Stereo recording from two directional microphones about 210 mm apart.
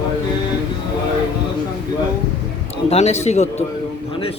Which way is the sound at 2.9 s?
30° left (ahead or behind).